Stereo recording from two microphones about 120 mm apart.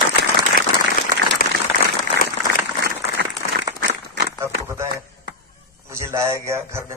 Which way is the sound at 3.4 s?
90° left.